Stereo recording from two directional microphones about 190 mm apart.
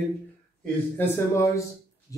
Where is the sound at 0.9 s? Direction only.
15° left (ahead or behind).